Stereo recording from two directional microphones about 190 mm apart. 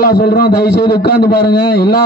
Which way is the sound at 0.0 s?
50° left (ahead or behind).